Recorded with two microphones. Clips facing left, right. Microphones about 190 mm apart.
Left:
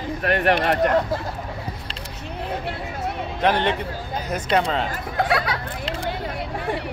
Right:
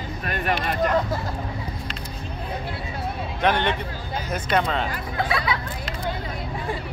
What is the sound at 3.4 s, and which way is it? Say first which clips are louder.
Speech: left 2 dB; 35° left (ahead or behind).